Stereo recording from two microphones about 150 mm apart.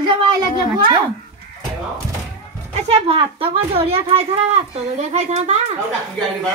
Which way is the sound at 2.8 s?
40° right (ahead or behind).